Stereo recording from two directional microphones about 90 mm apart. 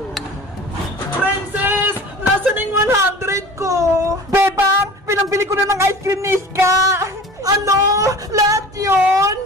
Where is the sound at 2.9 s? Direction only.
35° right (ahead or behind).